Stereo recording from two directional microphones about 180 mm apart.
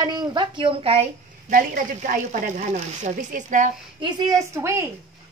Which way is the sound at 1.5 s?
50° right (ahead or behind).